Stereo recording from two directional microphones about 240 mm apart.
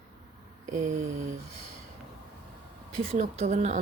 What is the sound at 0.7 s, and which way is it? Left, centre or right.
Mantra, right.